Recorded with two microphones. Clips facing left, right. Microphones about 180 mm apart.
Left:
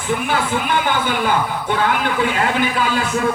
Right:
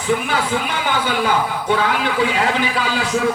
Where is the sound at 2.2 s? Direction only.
55° left (ahead or behind).